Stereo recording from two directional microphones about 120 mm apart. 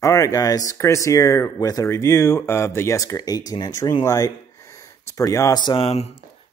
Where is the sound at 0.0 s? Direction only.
30° left (ahead or behind).